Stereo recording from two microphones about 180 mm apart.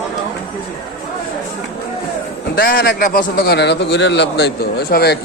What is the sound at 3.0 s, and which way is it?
A man's voice, 50° left (ahead or behind).